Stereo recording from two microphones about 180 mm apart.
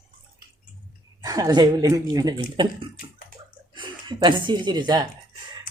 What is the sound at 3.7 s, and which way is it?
Speech, 25° right (ahead or behind).